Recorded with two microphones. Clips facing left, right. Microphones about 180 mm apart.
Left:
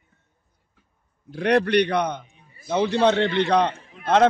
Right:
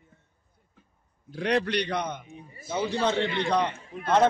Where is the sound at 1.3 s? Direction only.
60° left (ahead or behind).